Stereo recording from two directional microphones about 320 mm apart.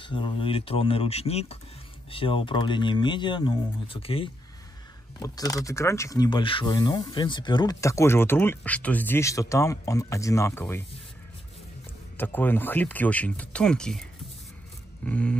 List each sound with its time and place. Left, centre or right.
0.0 s speech: centre
12.2 s speech: centre
15.0 s speech: centre